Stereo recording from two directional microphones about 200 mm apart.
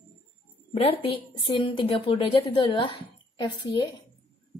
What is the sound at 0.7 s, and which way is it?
A woman's voice, 30° left (ahead or behind).